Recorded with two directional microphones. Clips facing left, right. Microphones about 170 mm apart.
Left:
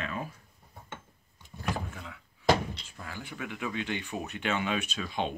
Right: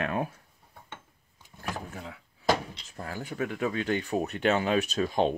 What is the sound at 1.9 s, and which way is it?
Speech, 35° right (ahead or behind).